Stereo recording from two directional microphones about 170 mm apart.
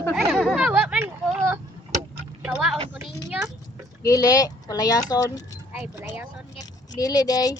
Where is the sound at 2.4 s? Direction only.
5° right (ahead or behind).